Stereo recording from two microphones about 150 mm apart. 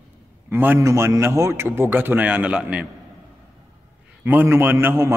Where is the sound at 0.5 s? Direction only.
15° right (ahead or behind).